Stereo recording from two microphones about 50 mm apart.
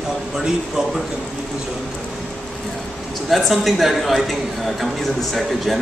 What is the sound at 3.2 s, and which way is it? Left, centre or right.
A woman's voice, centre.